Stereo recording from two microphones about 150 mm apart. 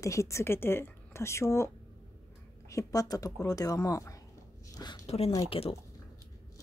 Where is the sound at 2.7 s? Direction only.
25° left (ahead or behind).